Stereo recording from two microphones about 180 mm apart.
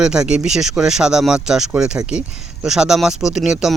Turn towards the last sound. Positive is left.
turn(degrees=-5)  # may be behind; listen again after turning